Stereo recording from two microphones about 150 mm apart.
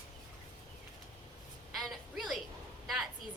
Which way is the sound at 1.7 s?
Centre (ahead or behind).